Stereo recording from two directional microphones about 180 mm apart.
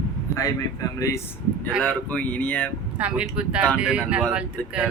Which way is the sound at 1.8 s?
10° left (ahead or behind).